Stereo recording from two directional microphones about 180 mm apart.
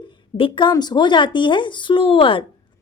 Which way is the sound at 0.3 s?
30° left (ahead or behind).